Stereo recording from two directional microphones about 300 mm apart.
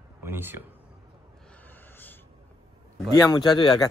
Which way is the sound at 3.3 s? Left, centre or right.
Centre.